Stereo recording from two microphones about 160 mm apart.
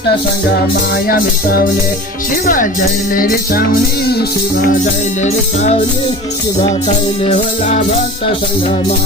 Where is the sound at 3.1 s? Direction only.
65° left (ahead or behind).